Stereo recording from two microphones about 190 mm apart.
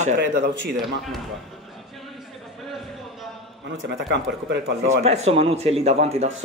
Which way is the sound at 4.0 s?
70° right (ahead or behind).